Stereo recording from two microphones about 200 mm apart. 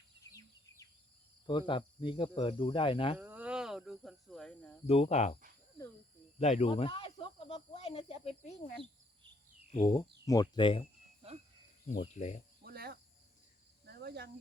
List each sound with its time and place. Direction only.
0.3 s a sound: 15° left (ahead or behind)
1.5 s speech: 25° left (ahead or behind)
3.2 s a sound: 10° right (ahead or behind)
4.9 s speech: 30° left (ahead or behind)
6.4 s speech: 30° left (ahead or behind)
9.7 s speech: 20° left (ahead or behind)
11.9 s speech: 40° left (ahead or behind)
12.6 s cricket: 50° right (ahead or behind)